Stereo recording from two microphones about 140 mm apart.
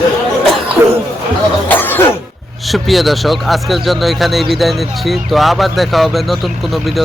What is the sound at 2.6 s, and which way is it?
Speech, centre (ahead or behind).